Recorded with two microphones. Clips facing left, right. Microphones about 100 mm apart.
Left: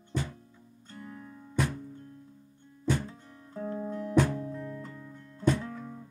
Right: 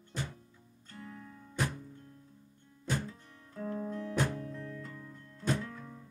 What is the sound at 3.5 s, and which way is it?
Music, 25° left (ahead or behind).